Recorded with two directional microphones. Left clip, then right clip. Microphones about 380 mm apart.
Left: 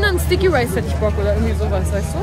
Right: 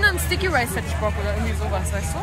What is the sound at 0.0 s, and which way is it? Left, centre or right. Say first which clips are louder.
Speech: left 4 dB; centre.